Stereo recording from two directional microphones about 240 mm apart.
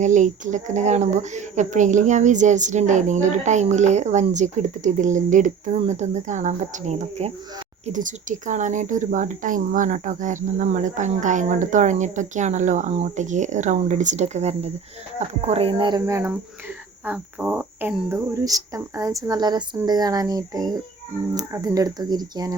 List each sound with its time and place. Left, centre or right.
0.0 s a woman's voice: right